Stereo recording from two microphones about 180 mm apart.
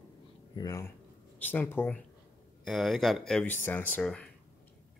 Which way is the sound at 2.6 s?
Centre (ahead or behind).